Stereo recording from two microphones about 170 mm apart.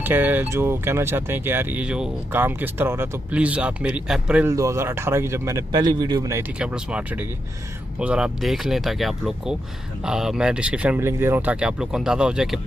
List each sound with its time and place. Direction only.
0.0 s speech: 10° right (ahead or behind)
6.6 s speech: 5° right (ahead or behind)